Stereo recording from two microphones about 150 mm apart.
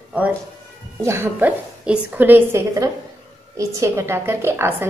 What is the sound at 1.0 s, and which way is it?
A woman's voice, 15° right (ahead or behind).